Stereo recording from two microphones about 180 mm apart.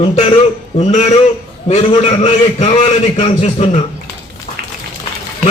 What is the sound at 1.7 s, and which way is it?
A man's voice, 35° left (ahead or behind).